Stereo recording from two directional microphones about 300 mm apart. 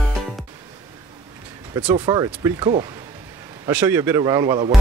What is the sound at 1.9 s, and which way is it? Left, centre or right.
Speech, centre.